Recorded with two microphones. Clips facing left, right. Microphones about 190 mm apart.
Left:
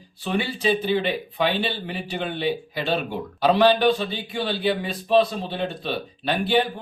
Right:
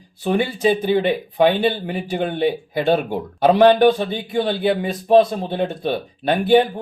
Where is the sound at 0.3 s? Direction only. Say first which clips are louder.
Right 5 dB; 50° right (ahead or behind).